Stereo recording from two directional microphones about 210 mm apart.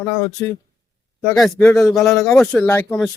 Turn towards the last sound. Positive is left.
turn(degrees=10)  # may be behind; listen again after turning